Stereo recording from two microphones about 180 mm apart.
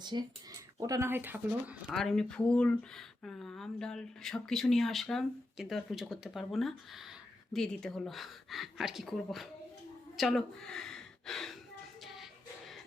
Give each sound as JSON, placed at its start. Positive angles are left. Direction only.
{"t": 0.0, "sound": "speech", "side_deg": -25}
{"t": 1.9, "sound": "speech", "side_deg": 0}
{"t": 12.0, "sound": "music", "side_deg": 0}